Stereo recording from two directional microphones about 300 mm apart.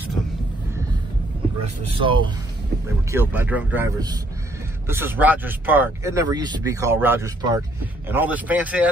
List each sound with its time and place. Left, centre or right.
1.6 s speech: centre